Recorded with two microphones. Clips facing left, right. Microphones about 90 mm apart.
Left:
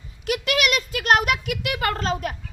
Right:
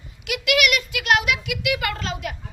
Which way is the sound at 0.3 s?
35° left (ahead or behind).